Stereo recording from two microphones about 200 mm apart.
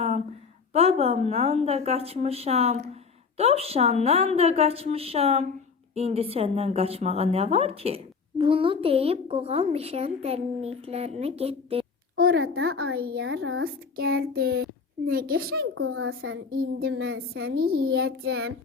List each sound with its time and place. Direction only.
0.7 s a woman's voice: 30° right (ahead or behind)
12.1 s a sound: 50° right (ahead or behind)
12.4 s speech: 90° right
13.0 s a child's voice: 60° right (ahead or behind); by 13.7 s 80° right
13.9 s a child's voice: 50° right (ahead or behind)
15.8 s speech: 90° right
16.5 s a child's voice: 55° right (ahead or behind)
17.0 s speech: 90° right
17.4 s a child's voice: 50° right (ahead or behind)